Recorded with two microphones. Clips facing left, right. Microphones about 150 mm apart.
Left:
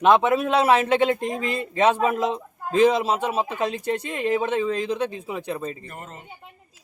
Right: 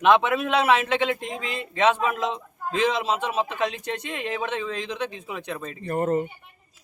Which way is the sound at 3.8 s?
35° left (ahead or behind).